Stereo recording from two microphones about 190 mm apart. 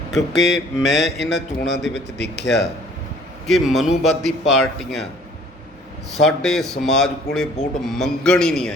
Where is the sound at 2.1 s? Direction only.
65° left (ahead or behind).